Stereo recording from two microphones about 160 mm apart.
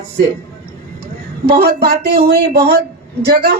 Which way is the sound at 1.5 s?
75° right (ahead or behind).